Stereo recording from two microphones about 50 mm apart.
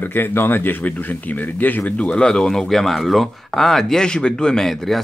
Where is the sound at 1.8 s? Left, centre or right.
Centre.